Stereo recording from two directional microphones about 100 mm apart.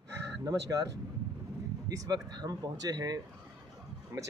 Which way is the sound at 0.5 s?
35° right (ahead or behind).